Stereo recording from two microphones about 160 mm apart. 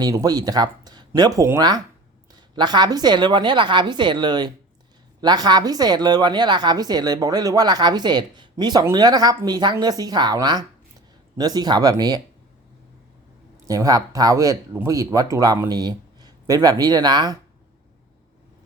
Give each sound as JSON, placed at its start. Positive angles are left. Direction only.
{"t": 0.0, "sound": "a woman's voice", "side_deg": -20}
{"t": 13.7, "sound": "a woman's voice", "side_deg": -20}